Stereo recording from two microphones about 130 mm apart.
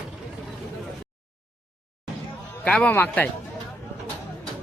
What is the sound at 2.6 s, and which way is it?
Speech, 10° left (ahead or behind).